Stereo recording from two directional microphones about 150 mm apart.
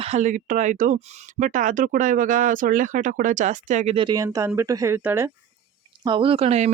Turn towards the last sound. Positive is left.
turn(degrees=-45)  # may be behind; listen again after turning